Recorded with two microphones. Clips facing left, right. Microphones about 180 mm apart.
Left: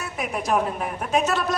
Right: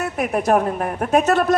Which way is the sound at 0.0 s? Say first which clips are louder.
Right 7 dB; 55° right (ahead or behind).